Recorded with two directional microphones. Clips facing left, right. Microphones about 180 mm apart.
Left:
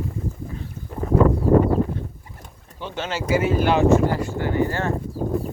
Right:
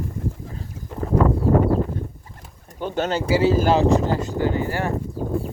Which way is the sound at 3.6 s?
35° right (ahead or behind).